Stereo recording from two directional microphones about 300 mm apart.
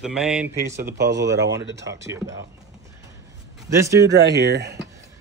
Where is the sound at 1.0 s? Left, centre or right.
Right.